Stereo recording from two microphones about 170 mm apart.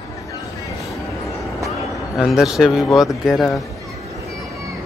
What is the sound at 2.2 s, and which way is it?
Speech, centre (ahead or behind).